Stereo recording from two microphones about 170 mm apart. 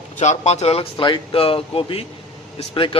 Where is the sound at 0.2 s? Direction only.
40° left (ahead or behind).